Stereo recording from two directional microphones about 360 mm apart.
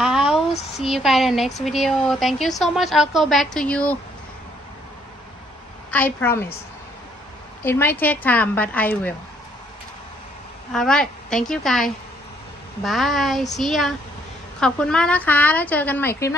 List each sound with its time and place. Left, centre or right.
0.0 s a sound: centre
0.5 s a sound: centre
0.8 s a woman's voice: centre
5.9 s a woman's voice: centre
7.6 s a woman's voice: centre
10.7 s a woman's voice: centre